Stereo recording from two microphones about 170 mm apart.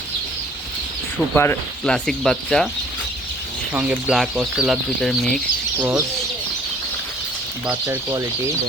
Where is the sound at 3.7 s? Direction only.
10° right (ahead or behind).